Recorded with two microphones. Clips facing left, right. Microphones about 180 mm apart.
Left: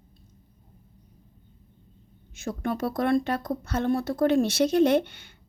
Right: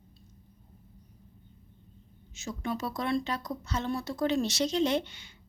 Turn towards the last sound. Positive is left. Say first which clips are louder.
# left 7 dB
turn(degrees=55)  # may be behind; listen again after turning